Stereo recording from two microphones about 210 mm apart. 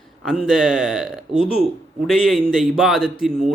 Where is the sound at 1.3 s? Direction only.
25° left (ahead or behind).